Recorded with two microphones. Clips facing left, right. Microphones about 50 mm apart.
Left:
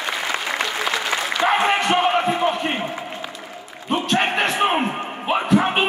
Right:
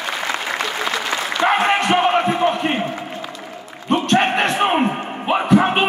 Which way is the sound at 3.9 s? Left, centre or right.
Centre.